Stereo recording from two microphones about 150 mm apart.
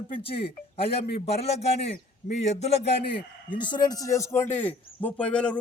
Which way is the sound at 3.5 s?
30° left (ahead or behind).